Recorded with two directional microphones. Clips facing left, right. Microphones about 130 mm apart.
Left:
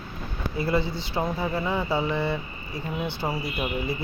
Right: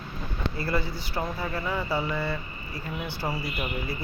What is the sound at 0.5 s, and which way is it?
Speech, 20° left (ahead or behind).